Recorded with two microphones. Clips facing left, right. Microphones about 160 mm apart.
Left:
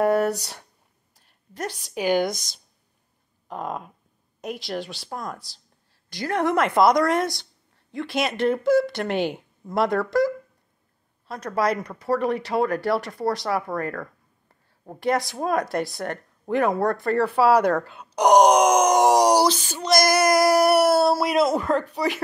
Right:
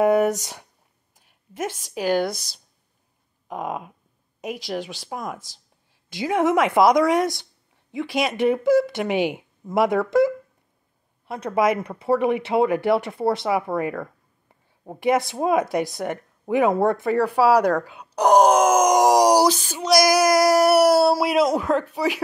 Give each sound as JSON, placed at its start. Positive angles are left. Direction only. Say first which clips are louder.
{"t": 0.0, "sound": "speech", "louder": "right 3 dB", "side_deg": -15}
{"t": 2.0, "sound": "speech", "louder": "even", "side_deg": 0}
{"t": 3.4, "sound": "a sound", "louder": "right 2 dB", "side_deg": -10}
{"t": 4.4, "sound": "speech", "louder": "right 1 dB", "side_deg": -5}
{"t": 10.0, "sound": "speech", "louder": "right 3 dB", "side_deg": -20}
{"t": 14.5, "sound": "a sound", "louder": "right 3 dB", "side_deg": -15}
{"t": 15.3, "sound": "speech", "louder": "right 3 dB", "side_deg": -15}
{"t": 16.7, "sound": "speech", "louder": "right 3 dB", "side_deg": -25}
{"t": 17.0, "sound": "speech", "louder": "right 1 dB", "side_deg": -5}